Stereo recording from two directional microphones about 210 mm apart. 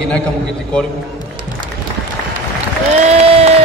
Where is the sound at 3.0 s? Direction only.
30° right (ahead or behind).